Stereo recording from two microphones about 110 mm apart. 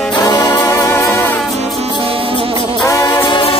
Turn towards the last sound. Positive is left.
turn(degrees=55)  # may be behind; listen again after turning